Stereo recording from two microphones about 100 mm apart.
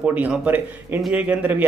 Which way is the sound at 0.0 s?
10° right (ahead or behind).